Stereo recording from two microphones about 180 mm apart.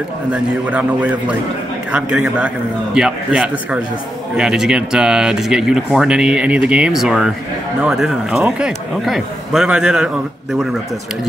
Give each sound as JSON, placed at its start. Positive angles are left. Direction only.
{"t": 0.3, "sound": "a man's voice", "side_deg": -5}